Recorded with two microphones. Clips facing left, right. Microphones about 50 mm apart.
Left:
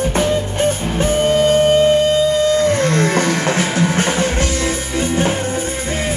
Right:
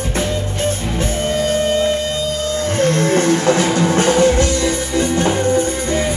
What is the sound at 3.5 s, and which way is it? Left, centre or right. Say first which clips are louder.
Music: right 2 dB; centre.